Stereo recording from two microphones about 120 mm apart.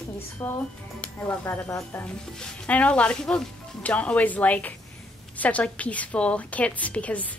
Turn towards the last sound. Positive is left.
turn(degrees=10)  # may be behind; listen again after turning